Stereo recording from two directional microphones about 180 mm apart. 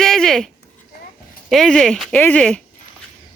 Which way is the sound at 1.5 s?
Centre (ahead or behind).